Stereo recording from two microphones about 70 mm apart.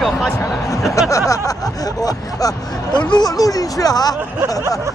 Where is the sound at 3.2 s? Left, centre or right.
Left.